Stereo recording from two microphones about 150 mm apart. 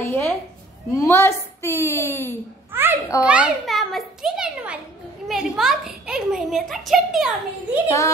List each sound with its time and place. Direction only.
0.0 s a sound: 15° left (ahead or behind)
0.9 s a woman's voice: 15° left (ahead or behind)
2.7 s a child's voice: 15° right (ahead or behind)